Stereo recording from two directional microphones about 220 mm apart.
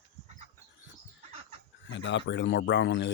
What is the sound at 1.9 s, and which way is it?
Speech, 55° left (ahead or behind).